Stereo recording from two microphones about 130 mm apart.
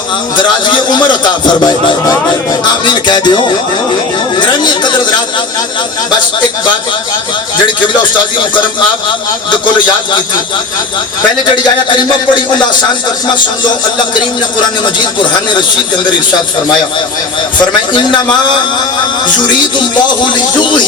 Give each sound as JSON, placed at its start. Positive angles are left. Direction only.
{"t": 1.2, "sound": "speech", "side_deg": 35}
{"t": 4.4, "sound": "chatter", "side_deg": 35}